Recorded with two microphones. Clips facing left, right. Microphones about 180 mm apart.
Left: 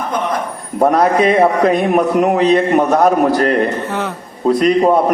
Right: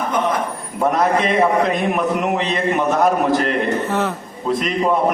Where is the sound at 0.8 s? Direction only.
40° left (ahead or behind).